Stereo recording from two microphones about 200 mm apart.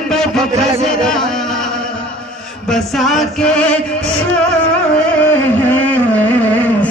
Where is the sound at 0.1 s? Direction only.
5° left (ahead or behind).